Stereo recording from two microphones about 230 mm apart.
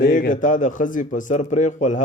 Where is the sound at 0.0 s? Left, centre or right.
Left.